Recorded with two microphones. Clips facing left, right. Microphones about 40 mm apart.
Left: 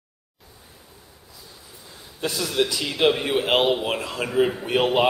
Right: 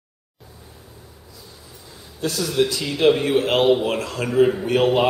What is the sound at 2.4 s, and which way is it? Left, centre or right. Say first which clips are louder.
A man's voice: right 3 dB; centre.